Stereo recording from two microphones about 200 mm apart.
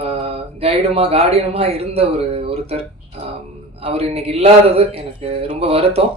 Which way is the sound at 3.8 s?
30° right (ahead or behind).